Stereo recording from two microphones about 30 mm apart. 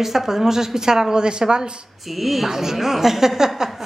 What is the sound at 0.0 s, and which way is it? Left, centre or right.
A woman's voice, centre.